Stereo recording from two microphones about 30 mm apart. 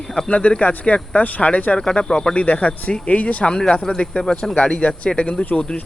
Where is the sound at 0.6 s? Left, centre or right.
Left.